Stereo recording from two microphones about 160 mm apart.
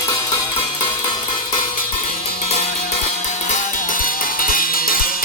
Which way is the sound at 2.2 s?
40° left (ahead or behind).